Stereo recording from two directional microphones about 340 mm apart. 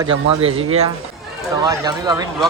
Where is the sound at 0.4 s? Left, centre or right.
Centre.